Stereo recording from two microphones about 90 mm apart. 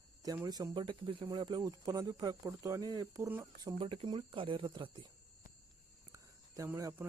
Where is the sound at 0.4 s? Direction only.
45° right (ahead or behind).